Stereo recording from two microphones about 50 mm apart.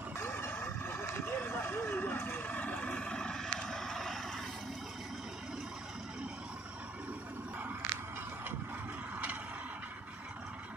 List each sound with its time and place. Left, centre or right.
0.2 s vehicle: left
3.0 s vehicle: centre